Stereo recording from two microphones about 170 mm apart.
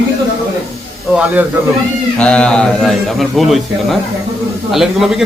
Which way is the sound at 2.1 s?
5° left (ahead or behind).